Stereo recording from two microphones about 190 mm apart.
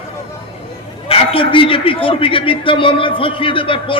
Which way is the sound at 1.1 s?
30° left (ahead or behind).